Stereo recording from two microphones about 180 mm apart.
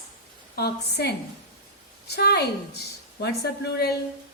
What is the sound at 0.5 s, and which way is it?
A woman's voice, 65° left (ahead or behind).